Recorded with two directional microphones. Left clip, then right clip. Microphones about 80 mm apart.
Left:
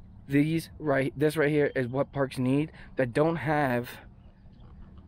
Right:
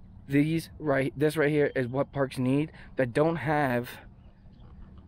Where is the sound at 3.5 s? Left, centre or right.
Right.